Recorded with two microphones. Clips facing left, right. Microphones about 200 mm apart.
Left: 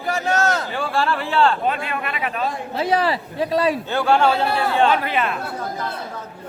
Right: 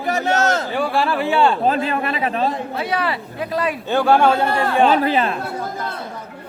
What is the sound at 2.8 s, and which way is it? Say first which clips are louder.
Speech: left 7 dB; 30° left (ahead or behind).